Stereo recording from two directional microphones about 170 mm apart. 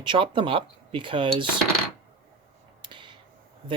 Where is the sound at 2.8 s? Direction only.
30° right (ahead or behind).